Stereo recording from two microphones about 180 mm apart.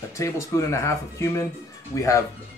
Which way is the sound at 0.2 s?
15° left (ahead or behind).